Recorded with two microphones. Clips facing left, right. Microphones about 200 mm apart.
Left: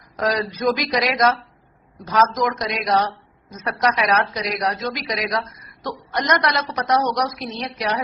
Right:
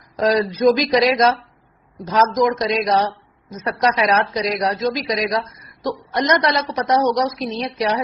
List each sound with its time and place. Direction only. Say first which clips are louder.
0.2 s a woman's voice: right 6 dB; 20° right (ahead or behind)